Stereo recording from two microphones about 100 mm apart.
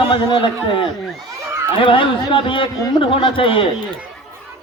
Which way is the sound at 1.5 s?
25° right (ahead or behind).